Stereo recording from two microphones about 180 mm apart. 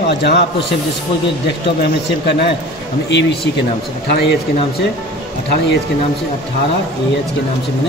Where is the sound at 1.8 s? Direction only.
70° left (ahead or behind).